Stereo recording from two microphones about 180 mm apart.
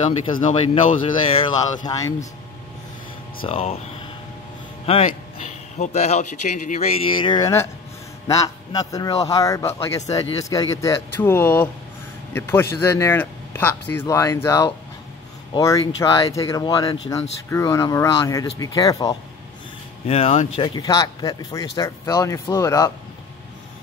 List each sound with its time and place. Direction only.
0.0 s speech: 30° left (ahead or behind)
1.9 s speech: 15° left (ahead or behind)
3.4 s speech: 35° left (ahead or behind)
5.5 s speech: 40° left (ahead or behind); by 19.1 s 20° left (ahead or behind)
20.1 s speech: 35° left (ahead or behind); by 22.8 s 20° left (ahead or behind)